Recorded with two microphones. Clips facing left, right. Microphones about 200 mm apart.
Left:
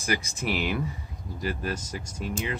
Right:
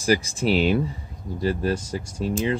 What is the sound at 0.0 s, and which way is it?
Speech, 30° right (ahead or behind).